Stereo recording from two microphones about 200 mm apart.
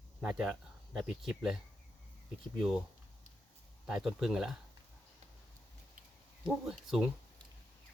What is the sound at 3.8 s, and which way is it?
Speech, centre (ahead or behind).